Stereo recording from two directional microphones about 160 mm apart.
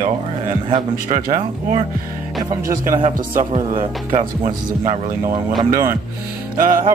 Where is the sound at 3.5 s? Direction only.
40° right (ahead or behind).